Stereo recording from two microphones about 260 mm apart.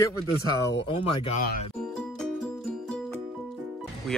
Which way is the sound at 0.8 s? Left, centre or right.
Left.